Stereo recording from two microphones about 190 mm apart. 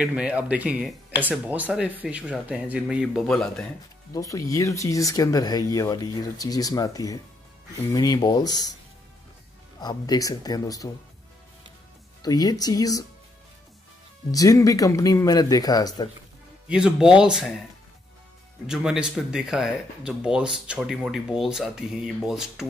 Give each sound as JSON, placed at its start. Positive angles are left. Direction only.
{"t": 0.0, "sound": "speech", "side_deg": -5}
{"t": 4.1, "sound": "speech", "side_deg": 20}
{"t": 9.8, "sound": "speech", "side_deg": 20}
{"t": 12.2, "sound": "speech", "side_deg": 20}
{"t": 14.3, "sound": "speech", "side_deg": 20}
{"t": 16.6, "sound": "speech", "side_deg": -5}
{"t": 18.7, "sound": "speech", "side_deg": -5}